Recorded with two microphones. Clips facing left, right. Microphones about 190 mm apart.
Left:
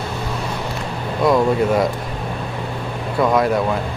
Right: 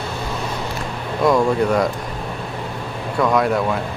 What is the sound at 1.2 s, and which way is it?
Speech, centre (ahead or behind).